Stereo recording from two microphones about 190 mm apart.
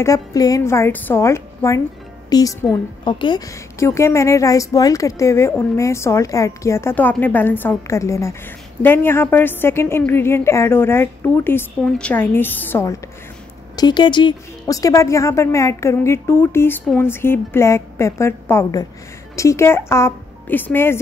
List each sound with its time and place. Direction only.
0.0 s a woman's voice: 20° left (ahead or behind)
2.2 s music: 20° left (ahead or behind)
3.1 s a woman's voice: 25° left (ahead or behind)
13.7 s a woman's voice: 25° left (ahead or behind)